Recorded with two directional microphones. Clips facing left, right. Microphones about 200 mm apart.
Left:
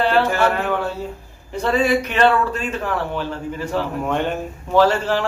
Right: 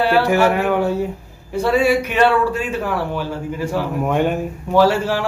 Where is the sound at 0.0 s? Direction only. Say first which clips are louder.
Right 2 dB; 10° right (ahead or behind).